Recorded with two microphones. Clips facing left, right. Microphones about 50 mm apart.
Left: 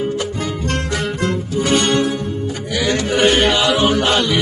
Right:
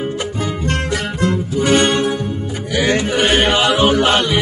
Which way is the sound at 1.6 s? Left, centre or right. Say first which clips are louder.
Right 2 dB; right.